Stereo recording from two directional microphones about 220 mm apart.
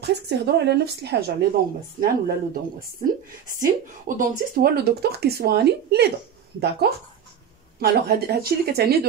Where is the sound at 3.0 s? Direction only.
40° right (ahead or behind).